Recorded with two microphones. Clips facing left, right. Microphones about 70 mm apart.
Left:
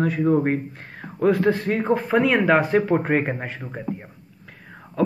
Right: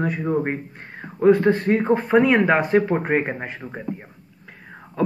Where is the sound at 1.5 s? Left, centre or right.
Right.